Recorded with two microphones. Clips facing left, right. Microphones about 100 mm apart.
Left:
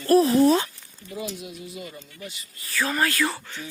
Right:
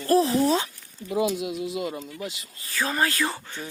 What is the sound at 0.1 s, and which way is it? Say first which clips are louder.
Speech: left 3 dB; 25° right (ahead or behind).